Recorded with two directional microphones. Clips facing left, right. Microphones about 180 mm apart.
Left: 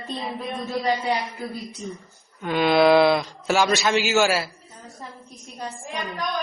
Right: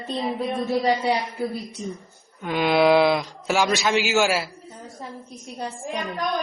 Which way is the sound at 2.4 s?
10° right (ahead or behind).